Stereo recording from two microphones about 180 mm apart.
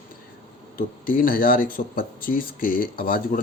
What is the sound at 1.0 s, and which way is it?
Speech, 50° left (ahead or behind).